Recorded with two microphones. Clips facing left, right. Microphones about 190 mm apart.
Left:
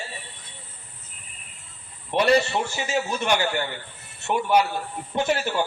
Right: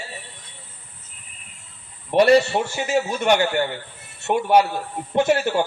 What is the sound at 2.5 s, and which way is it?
Speech, 45° right (ahead or behind).